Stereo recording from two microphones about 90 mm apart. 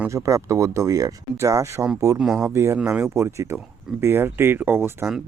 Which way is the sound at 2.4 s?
30° right (ahead or behind).